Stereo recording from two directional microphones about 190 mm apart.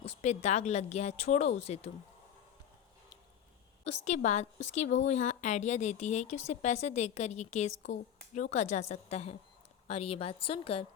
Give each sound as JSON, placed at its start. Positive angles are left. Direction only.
{"t": 0.0, "sound": "speech", "side_deg": 35}
{"t": 3.8, "sound": "speech", "side_deg": 40}